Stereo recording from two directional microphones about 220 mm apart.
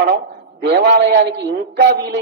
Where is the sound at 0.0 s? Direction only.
45° right (ahead or behind).